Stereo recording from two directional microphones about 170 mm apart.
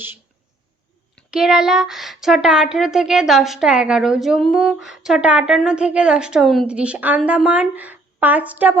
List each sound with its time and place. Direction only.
1.3 s a woman's voice: 5° right (ahead or behind)